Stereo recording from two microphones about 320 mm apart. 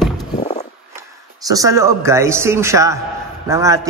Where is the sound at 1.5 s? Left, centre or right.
Centre.